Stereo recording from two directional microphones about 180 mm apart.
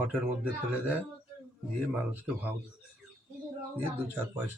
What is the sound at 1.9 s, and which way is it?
Speech, 10° right (ahead or behind).